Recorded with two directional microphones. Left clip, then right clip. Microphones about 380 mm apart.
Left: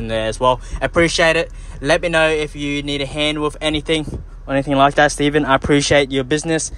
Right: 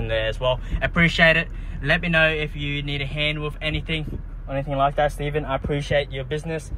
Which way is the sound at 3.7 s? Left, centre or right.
Left.